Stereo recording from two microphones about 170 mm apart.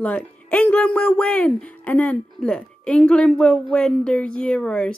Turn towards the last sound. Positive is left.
turn(degrees=5)  # may be behind; listen again after turning